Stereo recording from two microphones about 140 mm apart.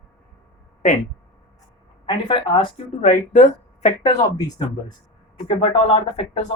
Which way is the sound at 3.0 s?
65° left (ahead or behind).